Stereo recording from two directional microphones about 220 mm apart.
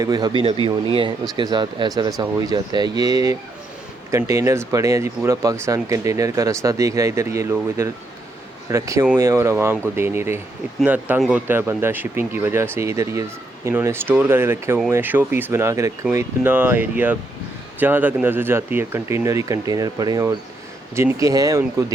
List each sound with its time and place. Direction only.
0.0 s speech: 20° right (ahead or behind)